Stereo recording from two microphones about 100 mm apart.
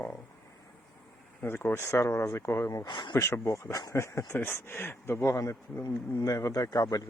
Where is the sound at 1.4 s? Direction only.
20° left (ahead or behind).